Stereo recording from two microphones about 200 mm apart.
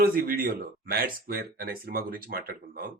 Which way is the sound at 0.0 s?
45° right (ahead or behind).